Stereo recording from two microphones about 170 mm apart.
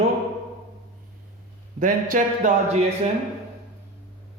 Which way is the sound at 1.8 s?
50° right (ahead or behind).